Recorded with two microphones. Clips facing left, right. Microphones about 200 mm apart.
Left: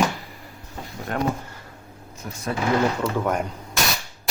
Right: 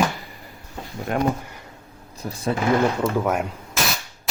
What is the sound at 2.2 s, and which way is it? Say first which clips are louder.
Speech: right 5 dB; 35° right (ahead or behind).